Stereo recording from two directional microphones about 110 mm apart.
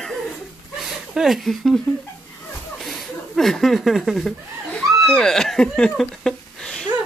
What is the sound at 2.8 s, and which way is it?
Chuckle, 5° left (ahead or behind).